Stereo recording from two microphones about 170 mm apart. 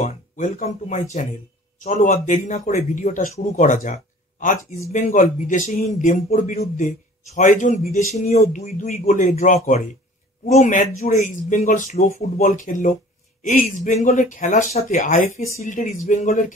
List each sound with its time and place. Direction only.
0.0 s speech: 45° left (ahead or behind)